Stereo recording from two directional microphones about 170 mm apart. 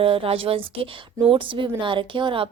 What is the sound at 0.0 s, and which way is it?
A woman's voice, 35° right (ahead or behind).